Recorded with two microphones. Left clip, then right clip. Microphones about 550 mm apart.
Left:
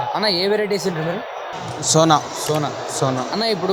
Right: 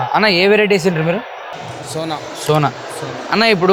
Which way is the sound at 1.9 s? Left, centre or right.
Left.